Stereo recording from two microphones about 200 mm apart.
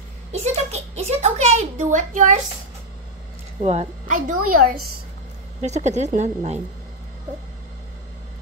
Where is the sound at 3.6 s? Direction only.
30° right (ahead or behind).